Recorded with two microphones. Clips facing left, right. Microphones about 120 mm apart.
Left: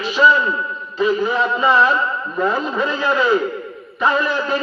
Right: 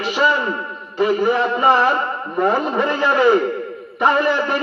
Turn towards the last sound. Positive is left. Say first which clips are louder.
# right 2 dB
turn(degrees=-60)  # may be behind; listen again after turning